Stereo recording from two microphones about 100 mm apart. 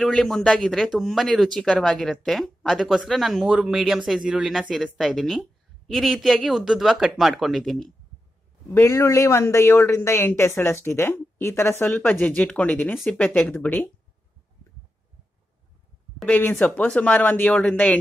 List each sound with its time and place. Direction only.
0.0 s speech: 5° left (ahead or behind)
8.6 s speech: 30° left (ahead or behind)
16.3 s speech: 20° left (ahead or behind)